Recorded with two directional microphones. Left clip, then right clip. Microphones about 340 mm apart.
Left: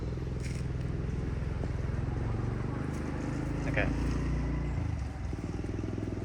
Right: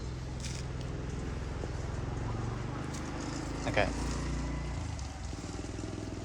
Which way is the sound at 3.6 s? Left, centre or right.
Centre.